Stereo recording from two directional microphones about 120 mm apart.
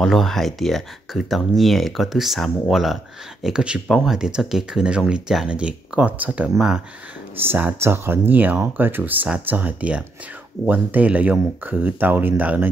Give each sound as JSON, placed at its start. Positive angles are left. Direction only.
{"t": 0.0, "sound": "speech", "side_deg": 0}